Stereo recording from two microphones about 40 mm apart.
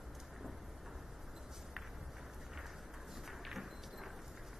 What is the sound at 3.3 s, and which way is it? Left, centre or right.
Clip-clop, centre.